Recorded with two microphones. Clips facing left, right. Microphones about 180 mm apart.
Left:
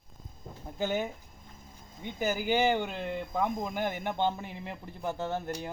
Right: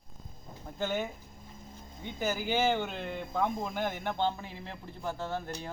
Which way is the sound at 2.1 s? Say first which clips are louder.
Left 2 dB; 15° left (ahead or behind).